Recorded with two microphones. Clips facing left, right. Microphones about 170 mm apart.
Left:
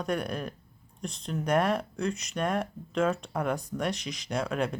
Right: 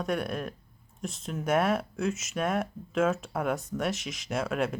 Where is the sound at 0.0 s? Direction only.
Centre (ahead or behind).